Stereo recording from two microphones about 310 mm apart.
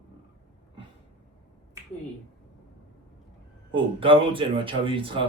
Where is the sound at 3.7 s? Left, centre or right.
Centre.